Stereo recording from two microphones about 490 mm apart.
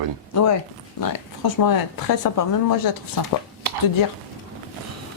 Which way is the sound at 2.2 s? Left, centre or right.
Left.